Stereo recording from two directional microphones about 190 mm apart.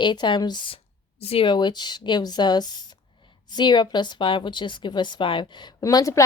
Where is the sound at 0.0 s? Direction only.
25° left (ahead or behind).